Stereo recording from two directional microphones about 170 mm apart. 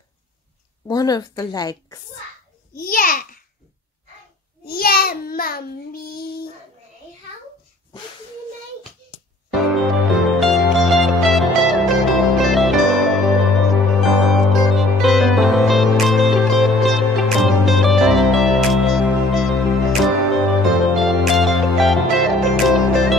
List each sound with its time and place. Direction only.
0.8 s a woman's voice: 25° left (ahead or behind)
2.8 s child singing: 55° left (ahead or behind)
4.6 s child singing: 65° left (ahead or behind)
9.5 s music: centre (ahead or behind)